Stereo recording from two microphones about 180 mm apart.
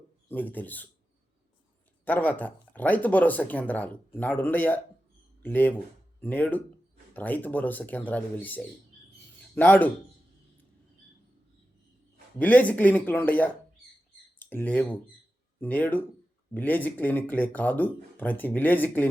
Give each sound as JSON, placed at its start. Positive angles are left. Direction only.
{"t": 0.3, "sound": "speech", "side_deg": 10}
{"t": 2.0, "sound": "speech", "side_deg": 10}
{"t": 12.4, "sound": "speech", "side_deg": 10}